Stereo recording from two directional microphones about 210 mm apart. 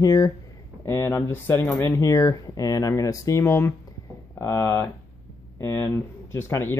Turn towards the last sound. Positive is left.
turn(degrees=10)  # may be behind; listen again after turning